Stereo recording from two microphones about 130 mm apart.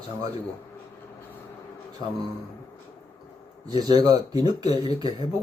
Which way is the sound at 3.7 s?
30° right (ahead or behind).